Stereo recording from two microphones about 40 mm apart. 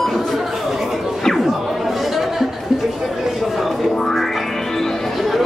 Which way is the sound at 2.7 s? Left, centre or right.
Centre.